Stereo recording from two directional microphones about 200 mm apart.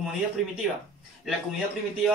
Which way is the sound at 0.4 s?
Centre (ahead or behind).